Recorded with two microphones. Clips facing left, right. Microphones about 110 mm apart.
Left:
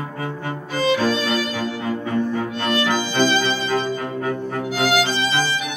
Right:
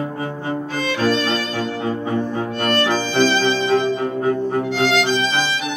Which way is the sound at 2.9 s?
15° left (ahead or behind).